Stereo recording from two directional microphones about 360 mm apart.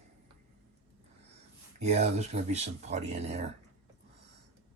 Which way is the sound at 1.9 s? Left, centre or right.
Centre.